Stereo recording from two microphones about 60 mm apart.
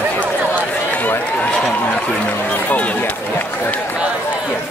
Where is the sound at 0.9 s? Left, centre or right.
Left.